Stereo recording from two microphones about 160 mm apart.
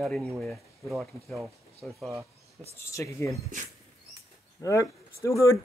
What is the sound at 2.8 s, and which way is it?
Speech, 20° left (ahead or behind).